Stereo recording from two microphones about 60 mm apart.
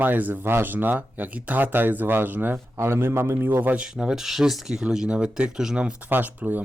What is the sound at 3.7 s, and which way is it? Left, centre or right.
Speech, centre.